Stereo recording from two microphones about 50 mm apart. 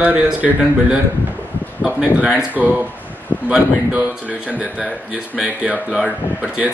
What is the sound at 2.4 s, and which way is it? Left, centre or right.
Speech, right.